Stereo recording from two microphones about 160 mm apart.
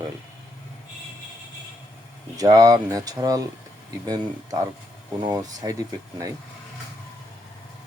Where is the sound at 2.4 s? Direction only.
20° right (ahead or behind).